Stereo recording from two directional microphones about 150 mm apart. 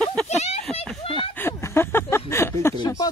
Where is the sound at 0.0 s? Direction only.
10° left (ahead or behind).